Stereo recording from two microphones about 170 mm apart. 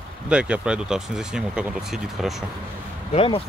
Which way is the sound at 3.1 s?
35° left (ahead or behind).